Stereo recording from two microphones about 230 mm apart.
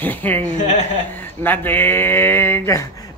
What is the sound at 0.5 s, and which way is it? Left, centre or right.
Speech, left.